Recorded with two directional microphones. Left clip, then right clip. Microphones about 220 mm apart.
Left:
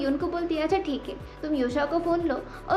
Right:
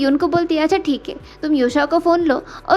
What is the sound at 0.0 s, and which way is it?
A woman's voice, 45° right (ahead or behind).